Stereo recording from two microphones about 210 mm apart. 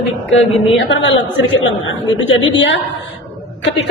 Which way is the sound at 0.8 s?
60° left (ahead or behind).